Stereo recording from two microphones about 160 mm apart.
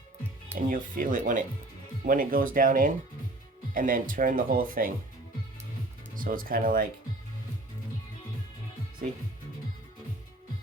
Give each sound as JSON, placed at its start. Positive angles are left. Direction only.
{"t": 0.5, "sound": "speech", "side_deg": -55}
{"t": 6.1, "sound": "speech", "side_deg": -60}